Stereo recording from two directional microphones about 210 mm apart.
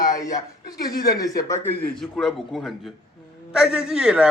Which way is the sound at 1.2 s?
15° left (ahead or behind).